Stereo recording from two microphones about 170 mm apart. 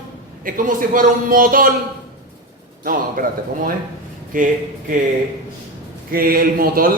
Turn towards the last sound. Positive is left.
turn(degrees=-60)  # may be behind; listen again after turning